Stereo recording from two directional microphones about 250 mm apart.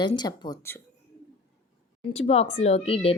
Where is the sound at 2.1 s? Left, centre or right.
Left.